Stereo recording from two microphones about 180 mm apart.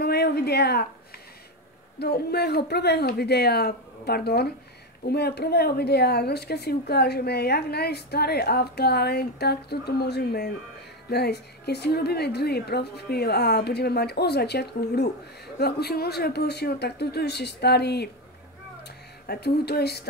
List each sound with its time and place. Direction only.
0.0 s a sound: 65° left (ahead or behind)
2.0 s speech: 65° left (ahead or behind)
19.2 s speech: 60° left (ahead or behind)